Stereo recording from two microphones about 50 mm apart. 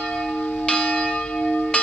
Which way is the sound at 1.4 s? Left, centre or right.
Left.